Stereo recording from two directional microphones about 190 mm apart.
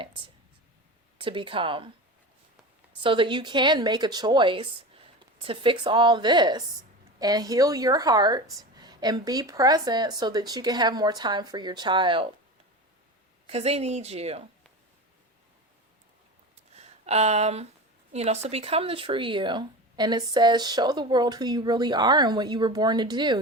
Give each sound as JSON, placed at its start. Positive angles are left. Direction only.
{"t": 0.0, "sound": "speech", "side_deg": -25}
{"t": 3.0, "sound": "speech", "side_deg": -25}
{"t": 13.5, "sound": "a woman's voice", "side_deg": -35}
{"t": 16.7, "sound": "a sound", "side_deg": -35}
{"t": 18.1, "sound": "speech", "side_deg": -35}